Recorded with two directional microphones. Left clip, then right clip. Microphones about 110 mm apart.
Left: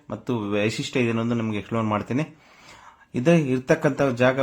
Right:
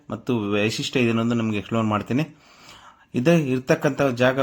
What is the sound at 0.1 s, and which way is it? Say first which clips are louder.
A man's voice: right 2 dB; 15° right (ahead or behind).